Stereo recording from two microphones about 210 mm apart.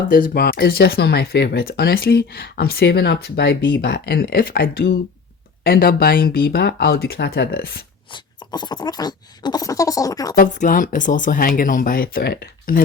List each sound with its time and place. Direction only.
0.1 s speech: 45° left (ahead or behind)
8.1 s a sound: 20° left (ahead or behind)
10.3 s speech: 40° left (ahead or behind)